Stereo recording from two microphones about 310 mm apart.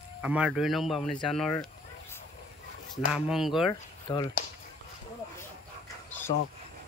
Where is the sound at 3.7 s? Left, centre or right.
Centre.